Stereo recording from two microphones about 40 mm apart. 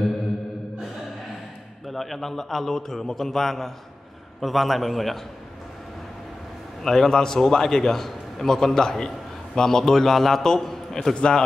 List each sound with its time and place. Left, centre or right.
1.9 s a man's voice: centre
6.8 s a man's voice: centre
11.1 s a man's voice: left